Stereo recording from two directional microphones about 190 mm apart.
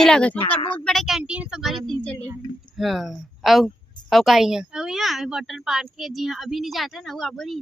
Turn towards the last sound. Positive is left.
turn(degrees=0)  # may be behind; listen again after turning